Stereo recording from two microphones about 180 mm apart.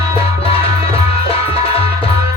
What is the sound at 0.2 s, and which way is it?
Music, 30° left (ahead or behind).